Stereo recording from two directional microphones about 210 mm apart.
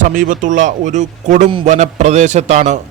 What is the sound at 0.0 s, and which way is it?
A man's voice, 40° right (ahead or behind).